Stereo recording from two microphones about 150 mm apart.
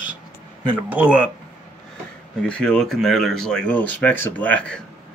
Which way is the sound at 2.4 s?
5° left (ahead or behind).